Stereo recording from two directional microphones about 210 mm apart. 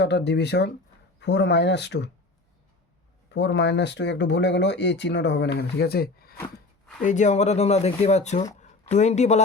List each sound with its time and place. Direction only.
0.0 s speech: 55° left (ahead or behind)
3.2 s speech: 55° left (ahead or behind)
7.0 s speech: 35° left (ahead or behind)